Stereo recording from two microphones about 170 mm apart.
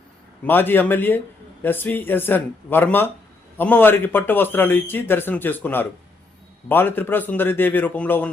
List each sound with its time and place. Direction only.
0.4 s a man's voice: 10° left (ahead or behind)